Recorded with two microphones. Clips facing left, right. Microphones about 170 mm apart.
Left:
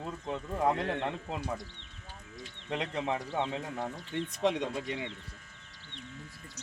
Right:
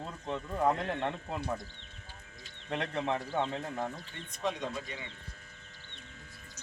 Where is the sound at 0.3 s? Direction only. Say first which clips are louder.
Even; 10° left (ahead or behind).